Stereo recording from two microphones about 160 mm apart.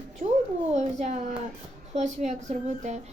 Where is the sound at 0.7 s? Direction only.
45° right (ahead or behind).